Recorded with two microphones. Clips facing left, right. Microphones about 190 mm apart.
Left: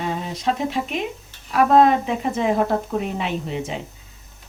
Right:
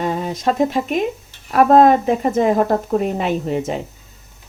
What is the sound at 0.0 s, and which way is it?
Speech, 45° right (ahead or behind).